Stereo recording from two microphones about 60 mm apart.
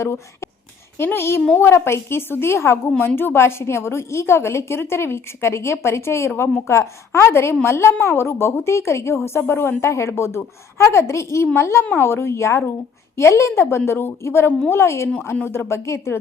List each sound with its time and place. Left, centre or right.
0.9 s a woman's voice: left
14.7 s a woman's voice: left